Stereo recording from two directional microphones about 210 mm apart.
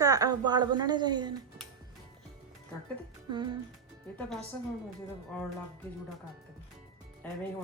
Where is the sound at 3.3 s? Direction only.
20° right (ahead or behind).